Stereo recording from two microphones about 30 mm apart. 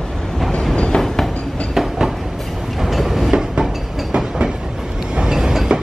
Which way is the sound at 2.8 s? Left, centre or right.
Centre.